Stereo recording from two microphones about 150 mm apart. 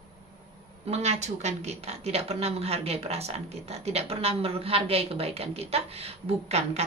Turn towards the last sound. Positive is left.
turn(degrees=-45)  # may be behind; listen again after turning